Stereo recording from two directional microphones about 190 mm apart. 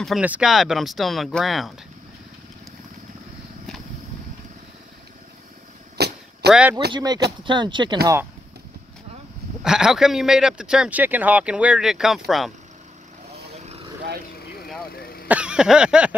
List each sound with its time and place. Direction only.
0.0 s speech: 5° right (ahead or behind)
5.9 s vehicle: 60° right (ahead or behind)
6.5 s speech: 5° right (ahead or behind)
6.9 s speech: 20° right (ahead or behind)
9.6 s speech: 5° right (ahead or behind)
13.6 s vehicle: 35° right (ahead or behind)
14.9 s throat clearing: 55° left (ahead or behind)
15.2 s a sound: 5° right (ahead or behind)